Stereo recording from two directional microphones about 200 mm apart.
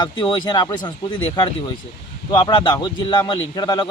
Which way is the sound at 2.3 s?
25° left (ahead or behind).